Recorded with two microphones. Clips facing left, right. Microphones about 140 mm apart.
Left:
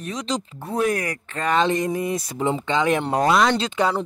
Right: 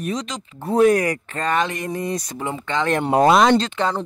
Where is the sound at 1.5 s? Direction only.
20° left (ahead or behind).